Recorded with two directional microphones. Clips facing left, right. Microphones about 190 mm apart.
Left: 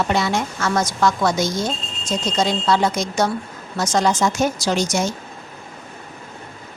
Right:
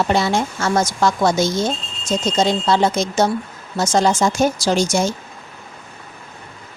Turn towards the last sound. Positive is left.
turn(degrees=-30)  # may be behind; listen again after turning